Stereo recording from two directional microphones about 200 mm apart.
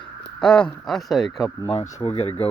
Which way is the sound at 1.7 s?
30° left (ahead or behind).